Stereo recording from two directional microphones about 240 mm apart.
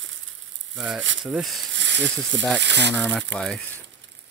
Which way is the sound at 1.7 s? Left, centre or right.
Right.